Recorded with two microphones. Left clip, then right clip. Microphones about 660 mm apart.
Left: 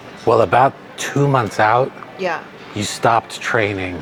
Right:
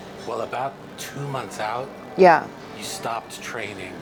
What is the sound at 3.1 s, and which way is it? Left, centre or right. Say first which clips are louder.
Speech: left 15 dB; left.